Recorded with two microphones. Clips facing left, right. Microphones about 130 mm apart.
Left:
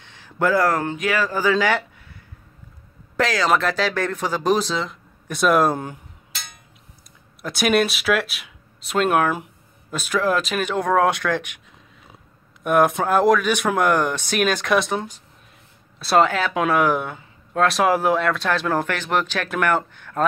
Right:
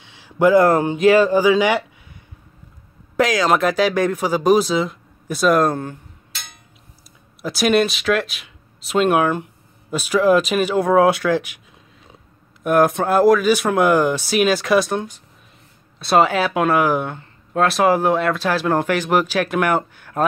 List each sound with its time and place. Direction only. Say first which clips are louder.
0.0 s speech: right 6 dB; 10° right (ahead or behind)
1.4 s speech: right 4 dB; 15° right (ahead or behind)
3.2 s speech: right 3 dB; 15° right (ahead or behind); by 5.8 s 5° left (ahead or behind)
7.4 s speech: right 2 dB; centre (ahead or behind)
12.6 s speech: right 2 dB; centre (ahead or behind)
16.3 s speech: right 3 dB; 10° right (ahead or behind)